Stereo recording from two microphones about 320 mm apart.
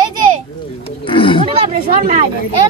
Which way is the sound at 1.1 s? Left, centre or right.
Centre.